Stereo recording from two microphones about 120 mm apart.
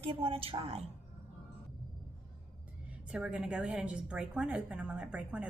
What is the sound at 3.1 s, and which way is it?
A woman's voice, 5° right (ahead or behind).